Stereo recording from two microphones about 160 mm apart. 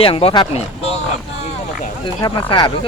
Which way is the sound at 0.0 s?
35° left (ahead or behind).